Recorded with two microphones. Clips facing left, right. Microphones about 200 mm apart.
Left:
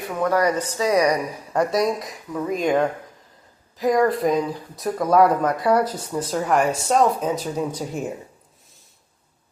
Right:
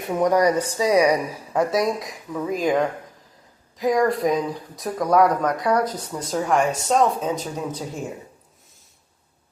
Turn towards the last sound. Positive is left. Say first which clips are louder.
# left 3 dB
turn(degrees=10)  # may be behind; listen again after turning